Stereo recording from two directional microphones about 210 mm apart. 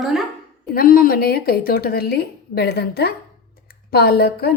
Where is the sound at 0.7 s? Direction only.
45° left (ahead or behind).